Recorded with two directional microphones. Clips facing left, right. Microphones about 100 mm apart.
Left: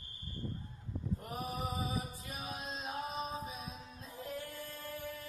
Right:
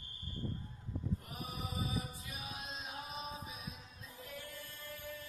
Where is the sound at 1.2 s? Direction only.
40° left (ahead or behind).